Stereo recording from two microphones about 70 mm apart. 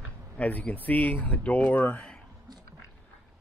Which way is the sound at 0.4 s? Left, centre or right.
Left.